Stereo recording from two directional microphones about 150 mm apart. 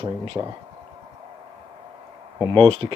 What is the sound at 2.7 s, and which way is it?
Speech, 35° right (ahead or behind).